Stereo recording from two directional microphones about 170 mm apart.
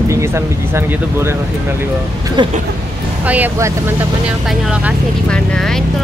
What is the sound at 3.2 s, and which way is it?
Speech, 10° right (ahead or behind).